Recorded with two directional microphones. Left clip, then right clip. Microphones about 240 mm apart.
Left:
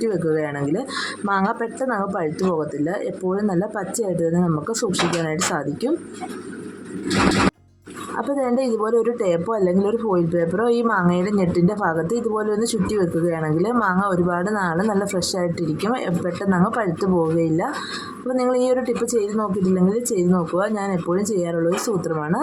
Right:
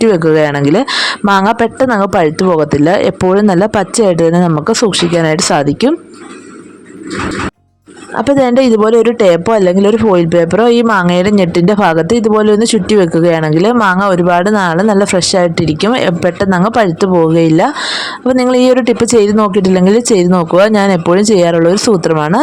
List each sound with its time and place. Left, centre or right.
0.0 s speech: right
8.2 s speech: right